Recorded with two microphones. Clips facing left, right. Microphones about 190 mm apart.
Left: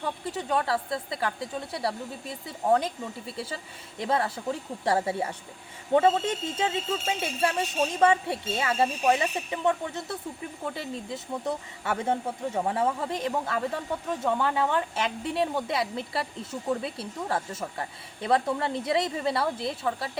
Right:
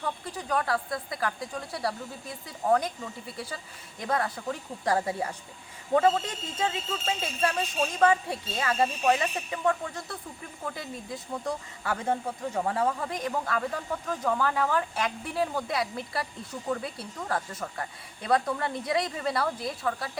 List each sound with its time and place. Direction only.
0.0 s speech: 25° left (ahead or behind)